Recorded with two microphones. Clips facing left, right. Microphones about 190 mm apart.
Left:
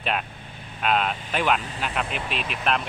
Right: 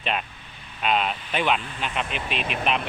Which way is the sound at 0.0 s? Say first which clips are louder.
Left 1 dB; 5° left (ahead or behind).